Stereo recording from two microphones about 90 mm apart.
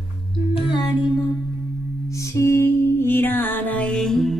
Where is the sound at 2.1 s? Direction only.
35° left (ahead or behind); by 4.3 s 5° left (ahead or behind).